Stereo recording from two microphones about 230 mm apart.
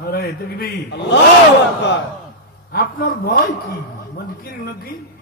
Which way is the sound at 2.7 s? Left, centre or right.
Left.